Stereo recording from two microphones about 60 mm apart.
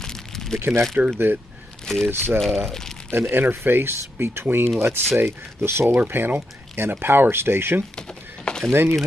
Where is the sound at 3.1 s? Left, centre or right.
Right.